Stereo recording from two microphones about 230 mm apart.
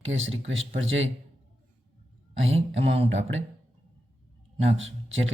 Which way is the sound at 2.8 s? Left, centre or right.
Right.